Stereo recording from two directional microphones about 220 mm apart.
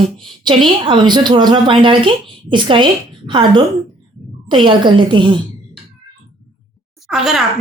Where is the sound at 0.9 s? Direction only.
20° right (ahead or behind).